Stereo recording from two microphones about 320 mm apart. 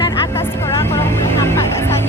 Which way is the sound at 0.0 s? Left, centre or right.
Centre.